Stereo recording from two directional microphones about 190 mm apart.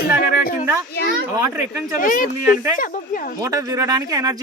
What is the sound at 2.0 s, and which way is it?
Speech, 45° left (ahead or behind).